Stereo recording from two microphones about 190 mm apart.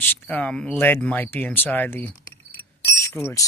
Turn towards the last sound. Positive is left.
turn(degrees=15)  # may be behind; listen again after turning